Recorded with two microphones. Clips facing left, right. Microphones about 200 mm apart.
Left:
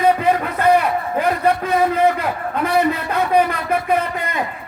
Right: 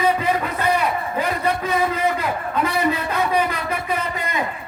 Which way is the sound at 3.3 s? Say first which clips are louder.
Left 5 dB; 55° left (ahead or behind).